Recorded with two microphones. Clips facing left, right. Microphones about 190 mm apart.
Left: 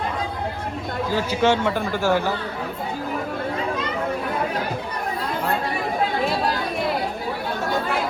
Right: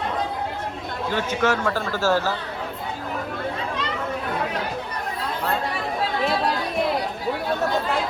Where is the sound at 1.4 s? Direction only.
25° left (ahead or behind).